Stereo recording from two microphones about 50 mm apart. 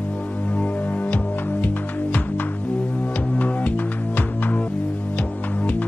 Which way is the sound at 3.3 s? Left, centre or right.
Left.